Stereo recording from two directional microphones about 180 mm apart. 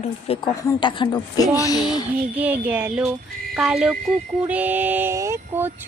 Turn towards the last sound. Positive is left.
turn(degrees=-15)  # may be behind; listen again after turning